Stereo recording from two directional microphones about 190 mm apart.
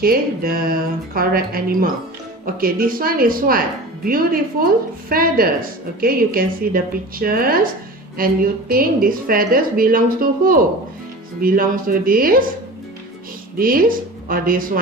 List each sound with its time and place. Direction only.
0.0 s a woman's voice: 50° right (ahead or behind)
13.6 s a woman's voice: 50° right (ahead or behind)